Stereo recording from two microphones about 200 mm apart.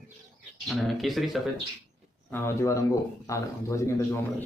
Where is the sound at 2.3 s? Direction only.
10° left (ahead or behind).